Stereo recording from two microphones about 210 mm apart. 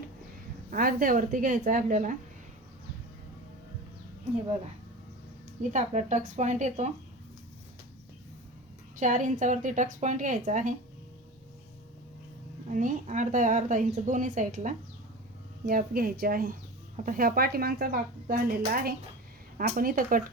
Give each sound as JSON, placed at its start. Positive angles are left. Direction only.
{"t": 0.7, "sound": "speech", "side_deg": -40}
{"t": 5.7, "sound": "speech", "side_deg": -35}
{"t": 9.0, "sound": "speech", "side_deg": -35}
{"t": 12.7, "sound": "speech", "side_deg": -35}